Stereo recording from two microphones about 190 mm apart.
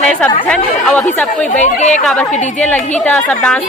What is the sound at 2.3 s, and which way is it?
Speech, 40° left (ahead or behind).